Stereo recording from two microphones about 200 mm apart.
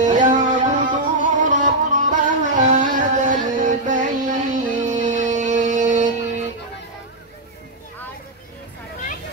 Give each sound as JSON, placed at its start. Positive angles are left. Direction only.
{"t": 0.0, "sound": "music", "side_deg": -40}